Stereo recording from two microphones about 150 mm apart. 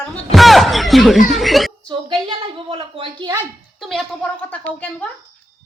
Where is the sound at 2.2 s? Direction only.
35° right (ahead or behind).